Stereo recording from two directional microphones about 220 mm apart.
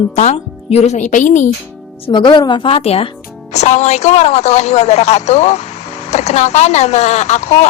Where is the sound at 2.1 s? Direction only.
20° left (ahead or behind).